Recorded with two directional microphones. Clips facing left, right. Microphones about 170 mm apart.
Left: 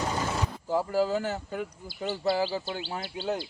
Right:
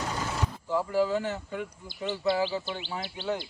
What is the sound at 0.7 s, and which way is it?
Speech, 40° left (ahead or behind).